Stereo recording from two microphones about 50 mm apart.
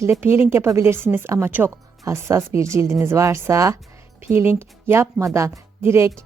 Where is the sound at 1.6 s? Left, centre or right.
Right.